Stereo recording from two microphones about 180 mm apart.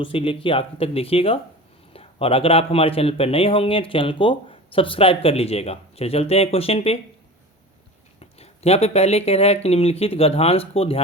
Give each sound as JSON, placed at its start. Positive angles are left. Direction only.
{"t": 0.0, "sound": "speech", "side_deg": 30}
{"t": 8.2, "sound": "speech", "side_deg": 35}